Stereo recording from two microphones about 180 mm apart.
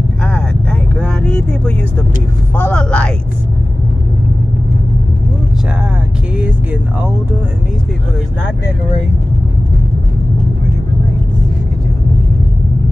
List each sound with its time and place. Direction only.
0.2 s vehicle: 5° left (ahead or behind)
2.5 s speech: 10° left (ahead or behind)